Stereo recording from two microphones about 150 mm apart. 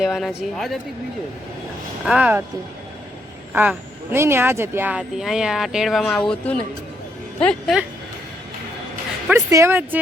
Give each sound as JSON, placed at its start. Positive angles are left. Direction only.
{"t": 0.0, "sound": "speech", "side_deg": 0}
{"t": 2.0, "sound": "speech", "side_deg": -10}
{"t": 3.5, "sound": "speech", "side_deg": -15}
{"t": 9.5, "sound": "speech", "side_deg": -20}